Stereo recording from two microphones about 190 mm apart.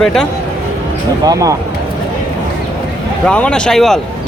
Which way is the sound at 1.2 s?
15° right (ahead or behind).